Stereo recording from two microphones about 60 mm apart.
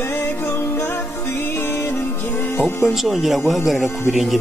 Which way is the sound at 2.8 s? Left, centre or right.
Centre.